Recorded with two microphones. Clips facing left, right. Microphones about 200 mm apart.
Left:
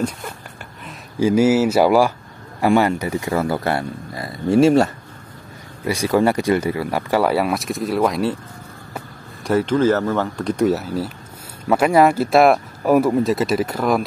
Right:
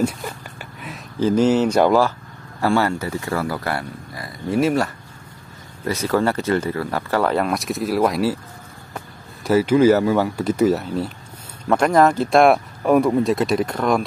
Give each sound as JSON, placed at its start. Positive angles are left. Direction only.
{"t": 1.2, "sound": "speech", "side_deg": 10}
{"t": 5.9, "sound": "speech", "side_deg": 10}